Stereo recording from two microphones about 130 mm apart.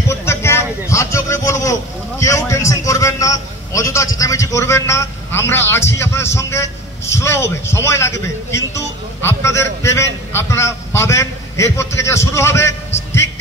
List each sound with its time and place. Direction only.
0.1 s a sound: 20° left (ahead or behind)
0.8 s vehicle: 20° left (ahead or behind)
7.2 s a man's voice: 20° left (ahead or behind)